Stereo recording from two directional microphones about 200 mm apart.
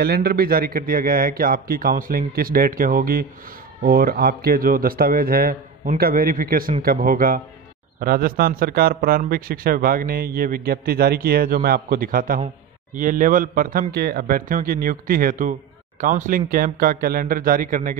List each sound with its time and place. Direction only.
0.0 s speech: 50° right (ahead or behind)